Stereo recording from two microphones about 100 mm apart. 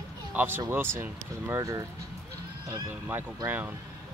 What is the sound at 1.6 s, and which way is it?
Speech, 35° right (ahead or behind).